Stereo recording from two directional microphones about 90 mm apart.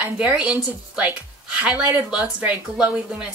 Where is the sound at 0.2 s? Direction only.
15° right (ahead or behind).